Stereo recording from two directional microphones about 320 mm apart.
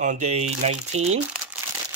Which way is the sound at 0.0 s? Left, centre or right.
Right.